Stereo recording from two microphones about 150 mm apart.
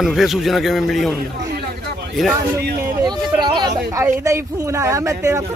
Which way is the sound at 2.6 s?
90° right.